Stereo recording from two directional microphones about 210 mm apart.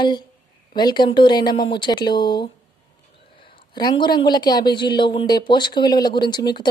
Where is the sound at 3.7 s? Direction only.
20° left (ahead or behind).